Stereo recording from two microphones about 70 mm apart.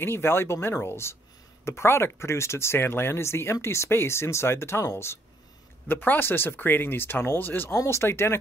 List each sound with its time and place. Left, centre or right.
0.0 s speech: left
7.7 s speech: left